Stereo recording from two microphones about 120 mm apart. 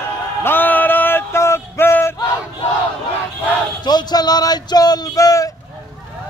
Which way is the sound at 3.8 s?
35° left (ahead or behind).